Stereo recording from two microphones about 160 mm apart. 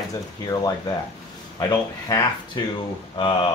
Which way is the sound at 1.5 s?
25° left (ahead or behind).